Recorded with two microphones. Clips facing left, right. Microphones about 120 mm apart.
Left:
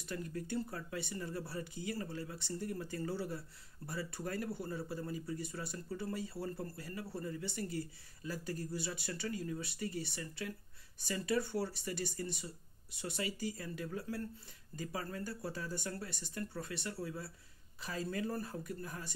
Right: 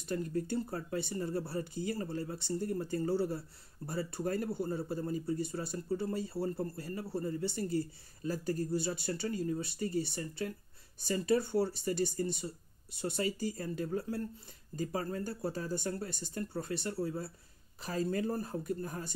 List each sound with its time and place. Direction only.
0.1 s speech: 35° right (ahead or behind)